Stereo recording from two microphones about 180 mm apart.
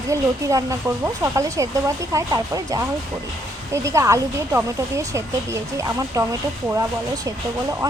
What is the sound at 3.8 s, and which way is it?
Speech, 15° right (ahead or behind).